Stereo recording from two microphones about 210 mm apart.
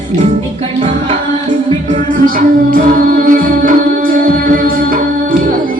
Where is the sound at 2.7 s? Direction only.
40° right (ahead or behind).